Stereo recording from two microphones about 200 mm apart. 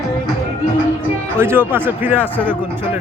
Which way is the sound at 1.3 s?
10° right (ahead or behind).